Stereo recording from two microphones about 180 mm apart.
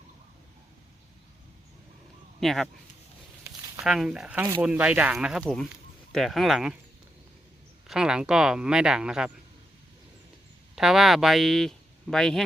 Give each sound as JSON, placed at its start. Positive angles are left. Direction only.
{"t": 2.4, "sound": "speech", "side_deg": 0}
{"t": 3.5, "sound": "a sound", "side_deg": -15}
{"t": 3.8, "sound": "speech", "side_deg": -5}
{"t": 7.9, "sound": "speech", "side_deg": -5}
{"t": 10.8, "sound": "speech", "side_deg": 0}